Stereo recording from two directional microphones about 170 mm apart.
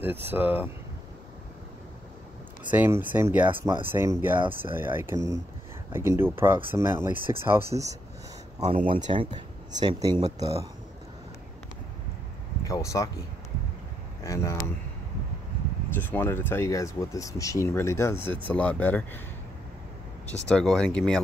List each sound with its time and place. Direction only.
0.3 s speech: 10° right (ahead or behind)
2.7 s speech: 10° right (ahead or behind)
7.1 s speech: 50° left (ahead or behind)
7.4 s speech: 15° right (ahead or behind)
8.6 s speech: 35° right (ahead or behind); by 10.7 s 20° right (ahead or behind)
12.6 s speech: 20° left (ahead or behind)
14.2 s speech: 20° left (ahead or behind)
15.9 s speech: 10° left (ahead or behind)
20.4 s speech: 5° left (ahead or behind)